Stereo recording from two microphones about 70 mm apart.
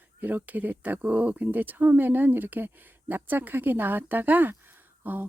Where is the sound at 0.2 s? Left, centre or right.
Right.